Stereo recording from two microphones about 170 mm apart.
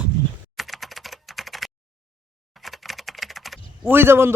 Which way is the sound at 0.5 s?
Centre (ahead or behind).